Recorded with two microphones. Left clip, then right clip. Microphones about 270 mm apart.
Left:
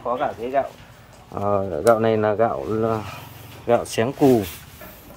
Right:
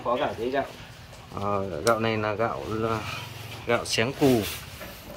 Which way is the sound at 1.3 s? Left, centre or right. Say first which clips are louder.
Left 6 dB; left.